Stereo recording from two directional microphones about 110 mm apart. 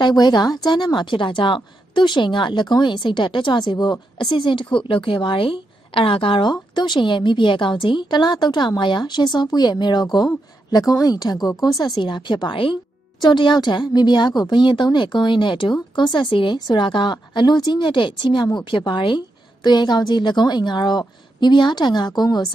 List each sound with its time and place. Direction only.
0.0 s a woman's voice: 40° left (ahead or behind)